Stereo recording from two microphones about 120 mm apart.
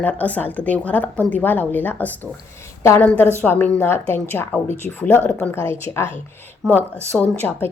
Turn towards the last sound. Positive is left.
turn(degrees=15)  # may be behind; listen again after turning